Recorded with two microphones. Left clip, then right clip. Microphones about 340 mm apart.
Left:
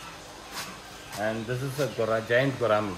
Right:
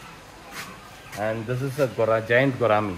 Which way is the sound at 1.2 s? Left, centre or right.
Centre.